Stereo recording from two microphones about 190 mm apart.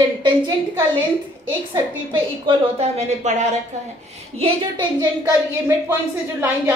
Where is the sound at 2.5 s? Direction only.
35° right (ahead or behind).